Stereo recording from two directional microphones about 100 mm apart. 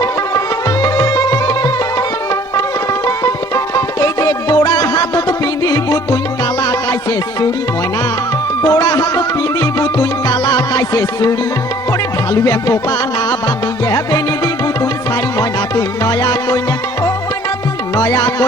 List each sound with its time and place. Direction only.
0.0 s music: 30° left (ahead or behind)
3.5 s music: 35° left (ahead or behind)
8.7 s music: 45° left (ahead or behind)
17.9 s music: 45° left (ahead or behind)